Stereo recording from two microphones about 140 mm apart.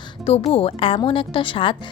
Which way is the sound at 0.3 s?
45° left (ahead or behind).